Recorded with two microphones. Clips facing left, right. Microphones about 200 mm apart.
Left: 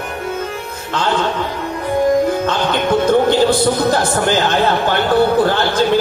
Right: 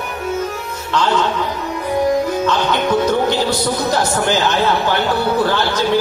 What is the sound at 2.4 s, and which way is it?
Speech, 55° left (ahead or behind).